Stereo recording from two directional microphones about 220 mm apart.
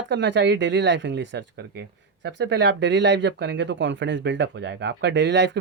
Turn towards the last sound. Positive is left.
turn(degrees=-55)  # may be behind; listen again after turning